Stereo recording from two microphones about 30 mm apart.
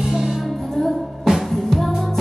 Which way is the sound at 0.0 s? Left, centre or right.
Centre.